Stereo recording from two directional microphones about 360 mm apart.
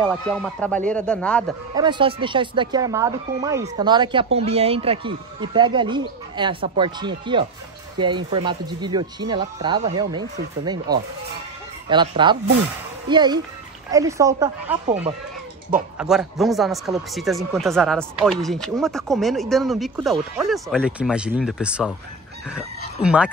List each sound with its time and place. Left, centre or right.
0.0 s speech: centre
1.8 s speech: centre
16.0 s speech: centre
23.0 s speech: centre